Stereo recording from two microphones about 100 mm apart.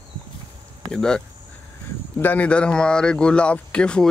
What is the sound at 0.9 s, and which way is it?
Speech, 5° left (ahead or behind).